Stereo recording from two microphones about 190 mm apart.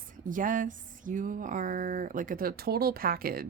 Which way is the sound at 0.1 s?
45° right (ahead or behind).